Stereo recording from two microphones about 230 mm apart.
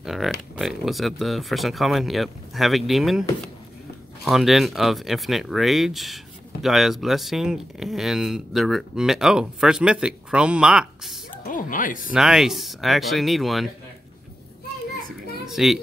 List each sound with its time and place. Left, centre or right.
0.0 s speech: centre
11.4 s speech: left
12.1 s speech: centre
15.4 s a child's voice: centre